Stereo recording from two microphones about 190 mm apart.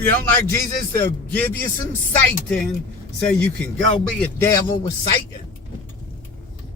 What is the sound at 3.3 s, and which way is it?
Speech, 5° left (ahead or behind).